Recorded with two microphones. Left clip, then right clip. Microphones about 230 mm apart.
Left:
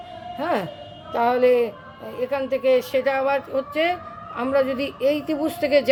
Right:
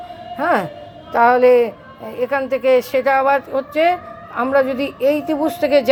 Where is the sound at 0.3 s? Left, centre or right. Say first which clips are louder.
Right 7 dB; centre.